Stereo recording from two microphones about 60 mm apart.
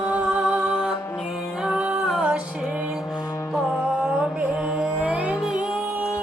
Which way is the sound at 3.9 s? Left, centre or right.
Centre.